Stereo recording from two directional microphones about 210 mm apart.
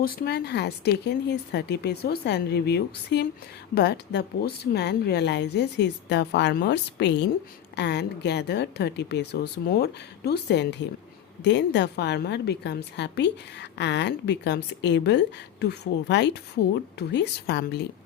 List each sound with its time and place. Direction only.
0.0 s a woman's voice: 45° left (ahead or behind)